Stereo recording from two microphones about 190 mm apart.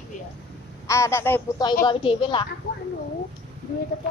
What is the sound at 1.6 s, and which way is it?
Speech, 20° left (ahead or behind).